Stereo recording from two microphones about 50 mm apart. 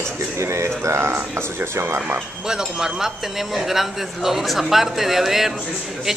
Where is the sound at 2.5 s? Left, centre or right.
Centre.